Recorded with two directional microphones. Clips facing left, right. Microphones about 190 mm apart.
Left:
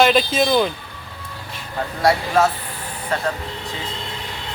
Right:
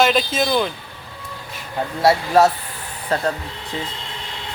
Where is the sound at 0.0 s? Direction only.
Centre (ahead or behind).